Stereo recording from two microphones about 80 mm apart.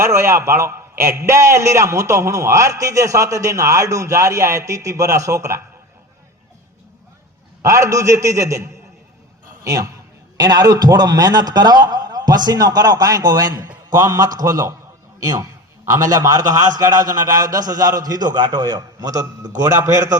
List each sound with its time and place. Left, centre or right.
0.0 s a man's voice: right
7.6 s a man's voice: right